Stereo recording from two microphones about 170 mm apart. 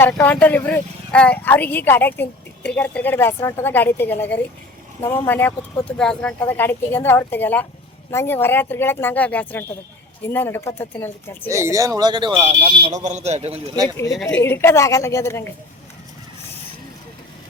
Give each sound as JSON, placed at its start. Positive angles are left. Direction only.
{"t": 0.0, "sound": "speech", "side_deg": 10}
{"t": 11.5, "sound": "speech", "side_deg": -20}
{"t": 14.1, "sound": "a woman's voice", "side_deg": 0}
{"t": 14.4, "sound": "speech", "side_deg": 15}